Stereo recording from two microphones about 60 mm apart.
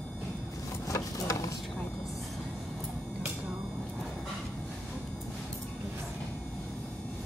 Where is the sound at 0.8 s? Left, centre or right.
Left.